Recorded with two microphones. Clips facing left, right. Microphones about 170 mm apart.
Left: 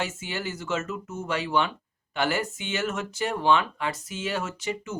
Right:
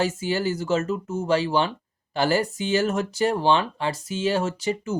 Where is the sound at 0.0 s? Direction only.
35° right (ahead or behind).